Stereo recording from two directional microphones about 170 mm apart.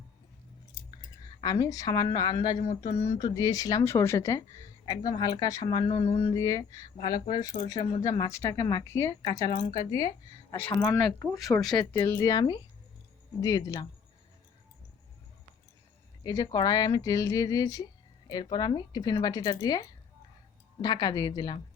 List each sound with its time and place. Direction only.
1.4 s a woman's voice: 25° left (ahead or behind)
9.7 s speech: 35° right (ahead or behind)
10.5 s a woman's voice: 15° left (ahead or behind)
16.2 s a woman's voice: 25° left (ahead or behind)